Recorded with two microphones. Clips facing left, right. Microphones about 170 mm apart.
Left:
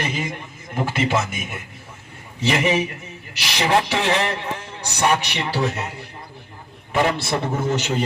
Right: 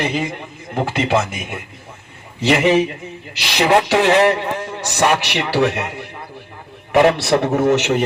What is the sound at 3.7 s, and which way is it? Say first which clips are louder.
A man's voice: right 6 dB; 70° right (ahead or behind).